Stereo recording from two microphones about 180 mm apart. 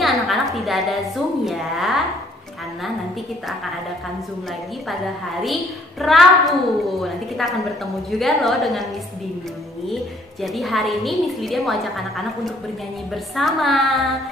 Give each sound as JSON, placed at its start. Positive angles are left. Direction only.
{"t": 0.0, "sound": "a woman's voice", "side_deg": 0}
{"t": 5.4, "sound": "a woman's voice", "side_deg": 0}
{"t": 10.4, "sound": "a woman's voice", "side_deg": 0}
{"t": 13.1, "sound": "a woman's voice", "side_deg": 0}